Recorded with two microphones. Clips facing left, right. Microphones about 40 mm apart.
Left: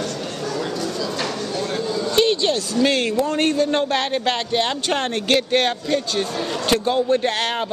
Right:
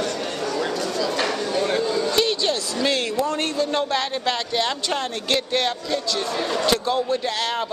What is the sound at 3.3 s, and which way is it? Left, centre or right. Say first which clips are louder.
A man's voice: left 4 dB; left.